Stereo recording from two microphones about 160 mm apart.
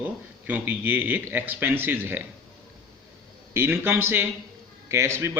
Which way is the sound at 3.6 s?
15° right (ahead or behind).